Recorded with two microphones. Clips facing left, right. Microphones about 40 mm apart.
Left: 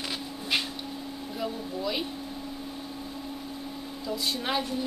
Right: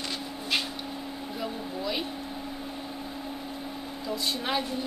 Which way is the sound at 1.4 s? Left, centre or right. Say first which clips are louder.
Left 2 dB; centre.